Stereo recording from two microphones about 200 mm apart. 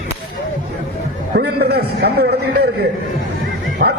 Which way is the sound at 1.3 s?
50° right (ahead or behind).